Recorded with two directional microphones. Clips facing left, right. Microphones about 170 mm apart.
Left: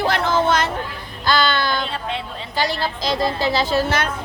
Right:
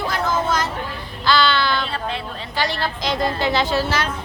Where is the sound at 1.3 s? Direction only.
45° left (ahead or behind).